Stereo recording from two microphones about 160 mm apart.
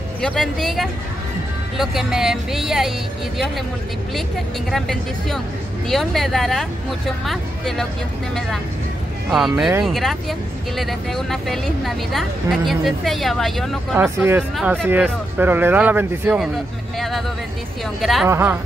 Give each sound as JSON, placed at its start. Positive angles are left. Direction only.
{"t": 0.2, "sound": "a woman's voice", "side_deg": 5}
{"t": 4.6, "sound": "a woman's voice", "side_deg": 0}
{"t": 9.3, "sound": "a woman's voice", "side_deg": -5}
{"t": 13.9, "sound": "speech", "side_deg": -15}
{"t": 18.0, "sound": "a woman's voice", "side_deg": 0}
{"t": 18.3, "sound": "speech", "side_deg": -15}